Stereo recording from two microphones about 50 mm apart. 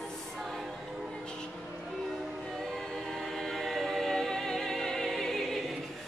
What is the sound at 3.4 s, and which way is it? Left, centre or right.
Music, centre.